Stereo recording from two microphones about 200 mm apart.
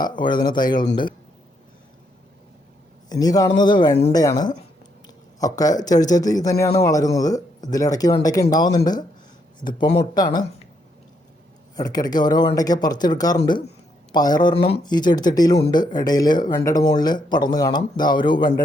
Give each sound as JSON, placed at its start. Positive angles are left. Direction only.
{"t": 0.0, "sound": "speech", "side_deg": 25}
{"t": 3.1, "sound": "a man's voice", "side_deg": 20}
{"t": 11.8, "sound": "speech", "side_deg": 20}